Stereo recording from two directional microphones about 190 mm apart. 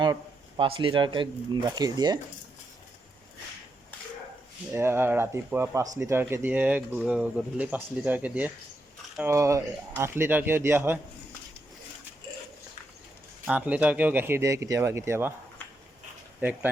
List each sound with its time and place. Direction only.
0.0 s a sound: 25° right (ahead or behind)
1.7 s speech: 20° right (ahead or behind)
4.7 s speech: 10° right (ahead or behind)
13.5 s speech: 5° right (ahead or behind)